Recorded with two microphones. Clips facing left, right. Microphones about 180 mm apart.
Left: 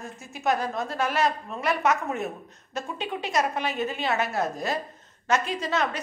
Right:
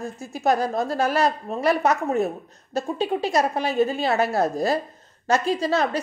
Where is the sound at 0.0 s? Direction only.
35° right (ahead or behind).